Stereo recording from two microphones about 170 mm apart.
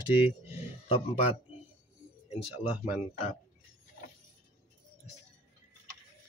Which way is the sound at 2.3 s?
10° right (ahead or behind).